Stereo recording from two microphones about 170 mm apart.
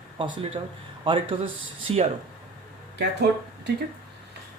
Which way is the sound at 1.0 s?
30° right (ahead or behind).